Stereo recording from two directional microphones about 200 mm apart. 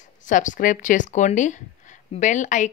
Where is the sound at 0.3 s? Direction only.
40° left (ahead or behind).